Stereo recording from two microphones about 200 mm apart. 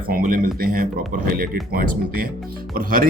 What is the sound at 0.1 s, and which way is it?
Speech, 45° right (ahead or behind).